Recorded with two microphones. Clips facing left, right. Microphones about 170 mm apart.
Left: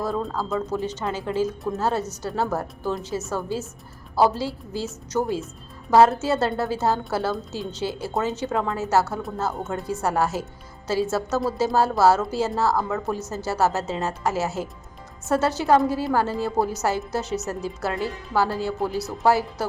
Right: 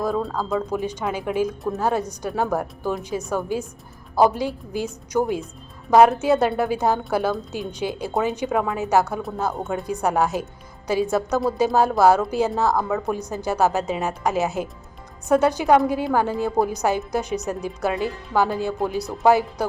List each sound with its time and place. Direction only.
0.4 s a woman's voice: 15° right (ahead or behind)